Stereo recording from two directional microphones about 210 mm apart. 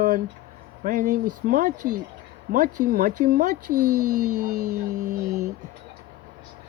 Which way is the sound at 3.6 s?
90° right.